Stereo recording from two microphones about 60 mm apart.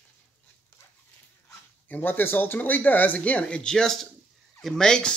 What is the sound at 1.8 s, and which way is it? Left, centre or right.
Speech, left.